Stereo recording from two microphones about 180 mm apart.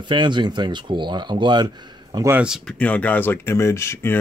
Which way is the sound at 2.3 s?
5° right (ahead or behind).